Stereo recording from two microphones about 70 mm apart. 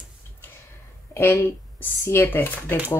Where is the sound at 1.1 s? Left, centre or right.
Left.